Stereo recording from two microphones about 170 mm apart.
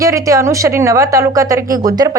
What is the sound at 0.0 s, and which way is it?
A woman's voice, 20° right (ahead or behind).